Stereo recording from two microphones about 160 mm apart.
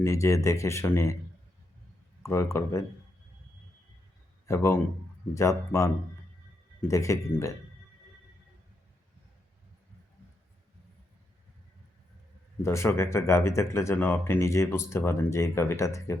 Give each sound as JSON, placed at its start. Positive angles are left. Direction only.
{"t": 0.0, "sound": "speech", "side_deg": 20}
{"t": 2.2, "sound": "speech", "side_deg": 20}
{"t": 4.4, "sound": "a man's voice", "side_deg": 15}
{"t": 12.6, "sound": "speech", "side_deg": 15}